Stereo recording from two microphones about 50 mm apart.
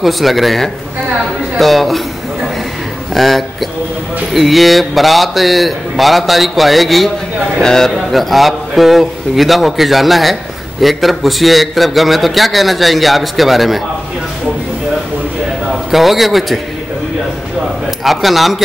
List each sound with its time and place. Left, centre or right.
0.0 s a man's voice: centre
3.2 s a man's voice: centre
15.9 s a man's voice: centre
18.0 s a man's voice: centre